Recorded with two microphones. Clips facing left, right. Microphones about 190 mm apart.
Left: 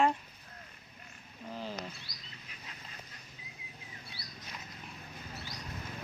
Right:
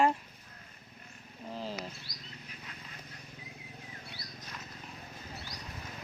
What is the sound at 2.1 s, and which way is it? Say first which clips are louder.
Bird: right 3 dB; 45° right (ahead or behind).